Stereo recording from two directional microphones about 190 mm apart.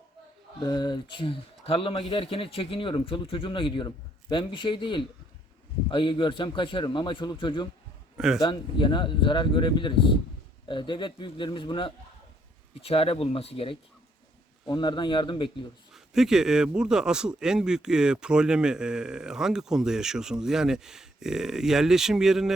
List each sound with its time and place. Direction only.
0.6 s speech: 20° left (ahead or behind)
15.9 s a man's voice: centre (ahead or behind)